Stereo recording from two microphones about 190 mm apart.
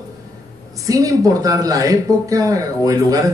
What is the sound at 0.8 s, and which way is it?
A man's voice, 20° right (ahead or behind).